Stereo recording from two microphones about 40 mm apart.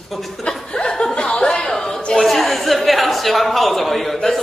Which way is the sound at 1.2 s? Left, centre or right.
Centre.